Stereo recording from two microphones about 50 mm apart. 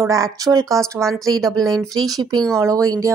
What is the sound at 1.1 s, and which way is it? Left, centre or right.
Speech, centre.